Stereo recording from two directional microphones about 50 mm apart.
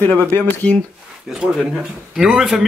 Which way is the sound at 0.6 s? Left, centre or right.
Left.